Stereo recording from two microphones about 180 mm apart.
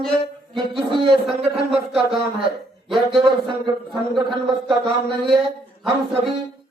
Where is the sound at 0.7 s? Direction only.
30° right (ahead or behind).